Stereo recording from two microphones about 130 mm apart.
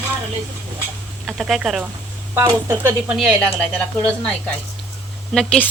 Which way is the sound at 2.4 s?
20° right (ahead or behind).